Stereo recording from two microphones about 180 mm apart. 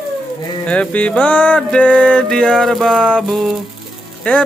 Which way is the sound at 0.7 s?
5° left (ahead or behind).